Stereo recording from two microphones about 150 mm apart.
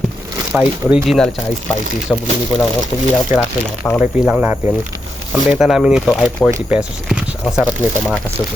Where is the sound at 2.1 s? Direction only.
15° left (ahead or behind).